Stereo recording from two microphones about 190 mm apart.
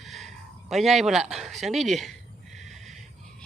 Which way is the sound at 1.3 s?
Centre (ahead or behind).